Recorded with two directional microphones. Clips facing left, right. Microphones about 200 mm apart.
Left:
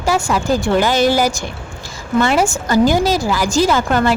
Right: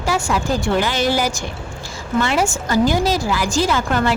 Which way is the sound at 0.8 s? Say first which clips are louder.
Left 5 dB; 45° left (ahead or behind).